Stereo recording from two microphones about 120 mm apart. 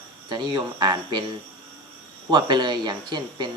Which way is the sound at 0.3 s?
40° right (ahead or behind).